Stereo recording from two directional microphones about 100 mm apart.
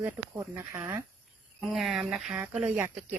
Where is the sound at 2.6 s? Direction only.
15° right (ahead or behind).